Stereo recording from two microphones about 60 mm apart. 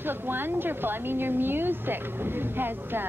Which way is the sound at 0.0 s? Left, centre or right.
Right.